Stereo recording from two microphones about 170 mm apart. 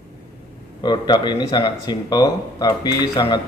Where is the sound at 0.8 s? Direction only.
25° left (ahead or behind).